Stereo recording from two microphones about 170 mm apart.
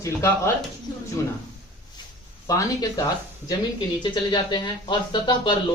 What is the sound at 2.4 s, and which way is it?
Speech, 20° left (ahead or behind).